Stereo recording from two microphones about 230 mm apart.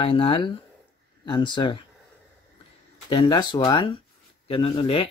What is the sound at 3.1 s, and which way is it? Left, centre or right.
Speech, centre.